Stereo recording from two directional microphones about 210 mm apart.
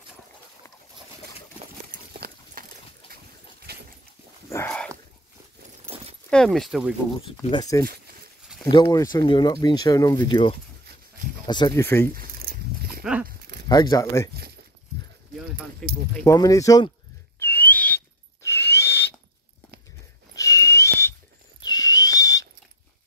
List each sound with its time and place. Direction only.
1.9 s clip-clop: 45° right (ahead or behind)
3.7 s dog: 50° right (ahead or behind)
4.5 s dog: 10° left (ahead or behind)
6.3 s speech: centre (ahead or behind)
7.3 s speech: 15° left (ahead or behind)
12.1 s zipper: 45° right (ahead or behind)
13.0 s a sound: 5° right (ahead or behind)
13.7 s speech: 20° left (ahead or behind)
15.8 s squish: 5° left (ahead or behind)
16.3 s speech: 15° left (ahead or behind)
17.4 s whistle: 10° left (ahead or behind)
20.3 s whistling: 15° left (ahead or behind)
21.5 s whistle: 20° left (ahead or behind)